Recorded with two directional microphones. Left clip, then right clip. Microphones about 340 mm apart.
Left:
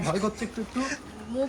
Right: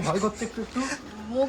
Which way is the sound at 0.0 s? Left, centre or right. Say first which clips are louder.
Right 2 dB; centre.